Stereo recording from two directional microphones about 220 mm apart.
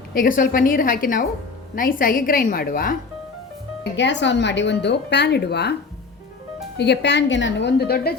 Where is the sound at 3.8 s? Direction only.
55° left (ahead or behind).